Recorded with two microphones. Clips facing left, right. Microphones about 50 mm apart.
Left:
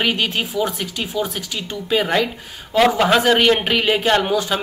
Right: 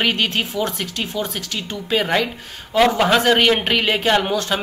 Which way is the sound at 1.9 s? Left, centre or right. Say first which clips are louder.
Left 1 dB; centre.